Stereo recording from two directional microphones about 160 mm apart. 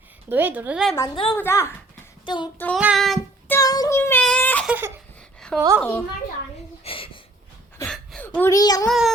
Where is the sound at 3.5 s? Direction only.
20° left (ahead or behind).